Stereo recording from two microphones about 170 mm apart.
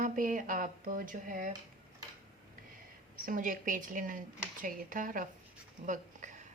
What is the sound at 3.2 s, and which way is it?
A woman's voice, 55° right (ahead or behind).